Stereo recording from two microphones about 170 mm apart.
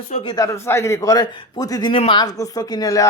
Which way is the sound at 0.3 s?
20° left (ahead or behind).